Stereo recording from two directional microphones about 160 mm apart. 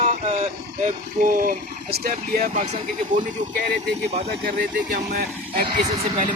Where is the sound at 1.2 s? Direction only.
55° right (ahead or behind); by 2.5 s 70° right (ahead or behind).